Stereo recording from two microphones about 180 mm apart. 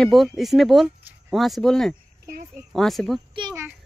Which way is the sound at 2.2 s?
50° right (ahead or behind).